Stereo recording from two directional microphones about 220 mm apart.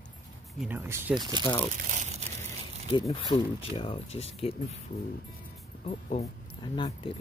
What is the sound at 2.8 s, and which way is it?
Speech, 20° left (ahead or behind).